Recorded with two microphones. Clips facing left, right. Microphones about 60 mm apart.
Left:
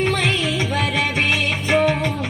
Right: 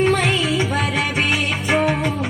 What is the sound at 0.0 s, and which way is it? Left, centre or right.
Music, right.